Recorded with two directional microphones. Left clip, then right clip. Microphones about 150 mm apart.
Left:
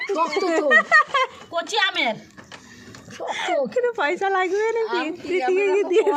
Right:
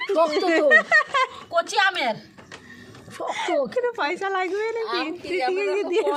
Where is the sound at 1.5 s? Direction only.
40° right (ahead or behind).